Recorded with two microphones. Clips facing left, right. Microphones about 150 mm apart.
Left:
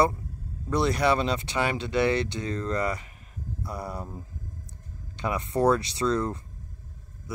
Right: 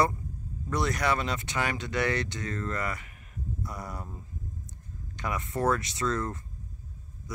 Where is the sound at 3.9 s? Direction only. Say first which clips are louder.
Left 4 dB; 15° left (ahead or behind).